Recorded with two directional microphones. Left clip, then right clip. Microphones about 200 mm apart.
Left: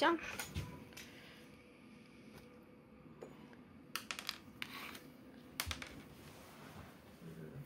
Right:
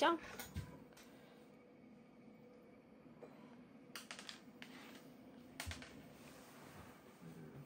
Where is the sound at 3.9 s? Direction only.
50° left (ahead or behind).